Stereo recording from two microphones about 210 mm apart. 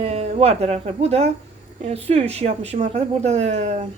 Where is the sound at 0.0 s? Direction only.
30° right (ahead or behind).